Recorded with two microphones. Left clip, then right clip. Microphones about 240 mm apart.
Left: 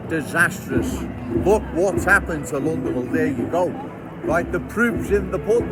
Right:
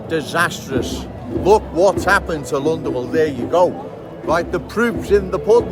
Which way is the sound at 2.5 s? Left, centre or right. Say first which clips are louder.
Right 5 dB; right.